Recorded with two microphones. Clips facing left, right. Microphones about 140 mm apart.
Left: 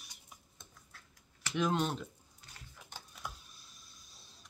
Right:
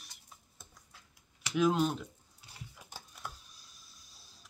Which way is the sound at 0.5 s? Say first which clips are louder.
Even; 10° right (ahead or behind).